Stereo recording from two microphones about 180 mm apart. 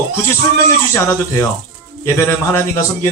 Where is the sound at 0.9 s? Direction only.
15° left (ahead or behind).